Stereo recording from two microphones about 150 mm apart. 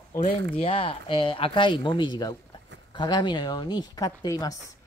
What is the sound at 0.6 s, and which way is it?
Speech, 40° left (ahead or behind).